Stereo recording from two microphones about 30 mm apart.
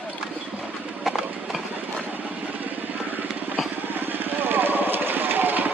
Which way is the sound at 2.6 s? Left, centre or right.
Right.